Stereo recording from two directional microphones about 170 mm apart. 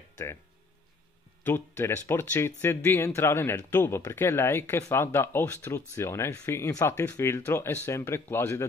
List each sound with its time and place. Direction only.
1.4 s speech: 15° left (ahead or behind)